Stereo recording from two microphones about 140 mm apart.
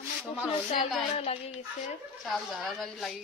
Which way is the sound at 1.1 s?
45° left (ahead or behind).